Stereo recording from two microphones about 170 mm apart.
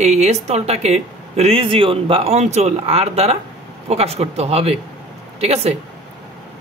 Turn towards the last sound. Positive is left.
turn(degrees=-40)  # may be behind; listen again after turning